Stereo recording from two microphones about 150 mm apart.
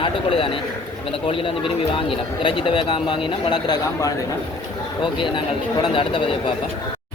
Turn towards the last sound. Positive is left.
turn(degrees=35)  # may be behind; listen again after turning